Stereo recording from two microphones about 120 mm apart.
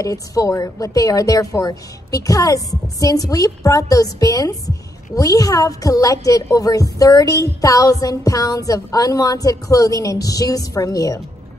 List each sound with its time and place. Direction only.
0.0 s a woman's voice: 30° left (ahead or behind)